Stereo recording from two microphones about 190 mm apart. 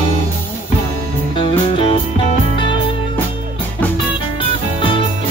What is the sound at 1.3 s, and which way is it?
Music, 25° left (ahead or behind).